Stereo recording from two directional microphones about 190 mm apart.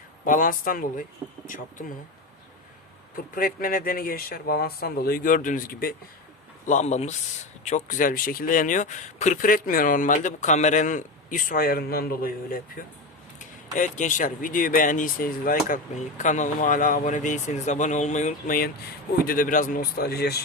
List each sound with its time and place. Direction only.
0.3 s speech: 45° left (ahead or behind)
3.3 s speech: 50° left (ahead or behind)
13.7 s speech: 40° left (ahead or behind); by 20.4 s 55° left (ahead or behind)